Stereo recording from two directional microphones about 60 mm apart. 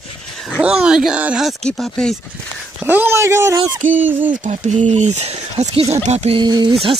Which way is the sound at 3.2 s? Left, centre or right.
Right.